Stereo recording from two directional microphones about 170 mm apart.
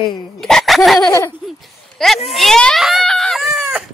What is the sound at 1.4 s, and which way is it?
A child's voice, centre (ahead or behind).